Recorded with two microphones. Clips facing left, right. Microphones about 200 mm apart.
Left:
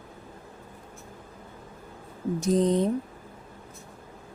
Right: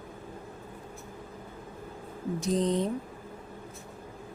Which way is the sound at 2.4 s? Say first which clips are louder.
Left 5 dB; 45° left (ahead or behind).